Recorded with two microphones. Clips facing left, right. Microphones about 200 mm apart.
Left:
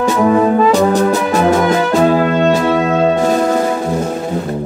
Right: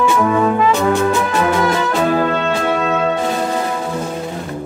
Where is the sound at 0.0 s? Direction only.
35° left (ahead or behind).